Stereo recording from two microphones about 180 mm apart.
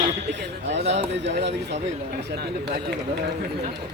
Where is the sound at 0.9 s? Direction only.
80° right.